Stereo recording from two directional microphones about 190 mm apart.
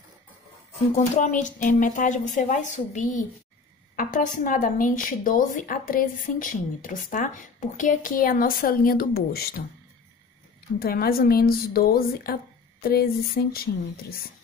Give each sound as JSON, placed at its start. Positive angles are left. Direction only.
{"t": 0.9, "sound": "speech", "side_deg": 40}
{"t": 10.8, "sound": "speech", "side_deg": 50}